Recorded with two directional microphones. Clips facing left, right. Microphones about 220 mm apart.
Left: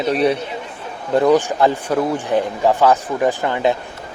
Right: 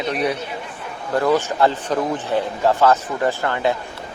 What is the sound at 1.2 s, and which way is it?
A man's voice, 15° left (ahead or behind).